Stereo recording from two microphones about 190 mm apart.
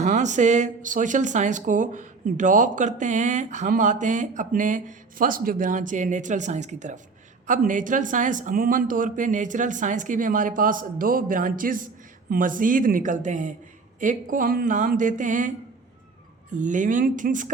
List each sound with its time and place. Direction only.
0.0 s speech: 40° right (ahead or behind)
16.6 s speech: 40° right (ahead or behind)